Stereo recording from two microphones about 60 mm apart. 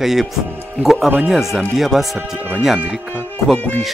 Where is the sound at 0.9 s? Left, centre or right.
Right.